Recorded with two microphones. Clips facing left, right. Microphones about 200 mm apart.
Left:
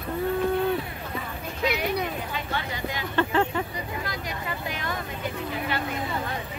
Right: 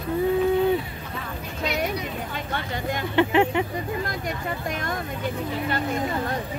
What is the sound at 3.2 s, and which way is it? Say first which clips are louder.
Speech: right 4 dB; 15° right (ahead or behind).